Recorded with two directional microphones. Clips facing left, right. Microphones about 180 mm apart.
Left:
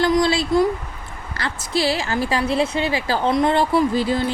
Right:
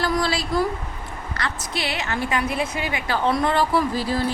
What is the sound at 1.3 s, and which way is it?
Speech, 30° left (ahead or behind).